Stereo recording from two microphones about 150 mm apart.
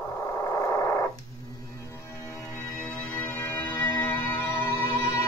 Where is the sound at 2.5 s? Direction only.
5° left (ahead or behind).